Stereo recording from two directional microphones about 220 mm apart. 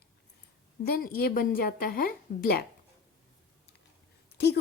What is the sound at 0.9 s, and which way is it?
A woman's voice, 40° left (ahead or behind).